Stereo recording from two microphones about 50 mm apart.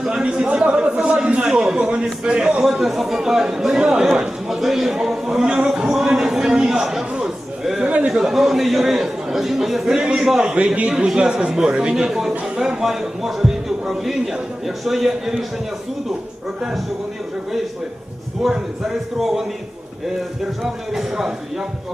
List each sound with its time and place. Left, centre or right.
0.0 s a man's voice: centre
2.6 s a man's voice: centre
5.5 s a sound: centre
7.9 s a sound: right
8.1 s a man's voice: centre
18.4 s a man's voice: centre
20.6 s a man's voice: centre